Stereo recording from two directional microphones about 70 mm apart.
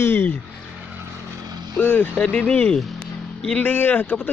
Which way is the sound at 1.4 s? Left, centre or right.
Right.